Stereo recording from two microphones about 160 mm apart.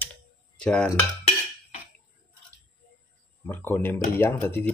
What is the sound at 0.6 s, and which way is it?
Cutlery, 5° left (ahead or behind).